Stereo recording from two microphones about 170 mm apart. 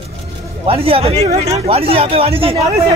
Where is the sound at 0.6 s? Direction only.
35° right (ahead or behind).